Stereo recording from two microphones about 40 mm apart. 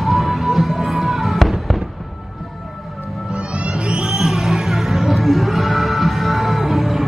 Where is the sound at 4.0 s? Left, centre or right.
Centre.